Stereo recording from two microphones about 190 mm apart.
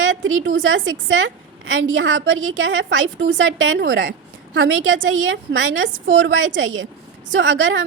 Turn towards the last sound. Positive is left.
turn(degrees=-90)